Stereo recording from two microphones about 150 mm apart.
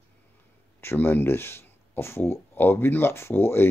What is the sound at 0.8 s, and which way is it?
Speech, 15° left (ahead or behind).